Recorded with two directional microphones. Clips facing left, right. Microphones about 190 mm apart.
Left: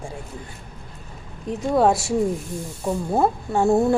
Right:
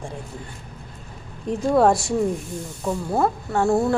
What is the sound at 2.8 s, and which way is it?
Speech, 15° left (ahead or behind).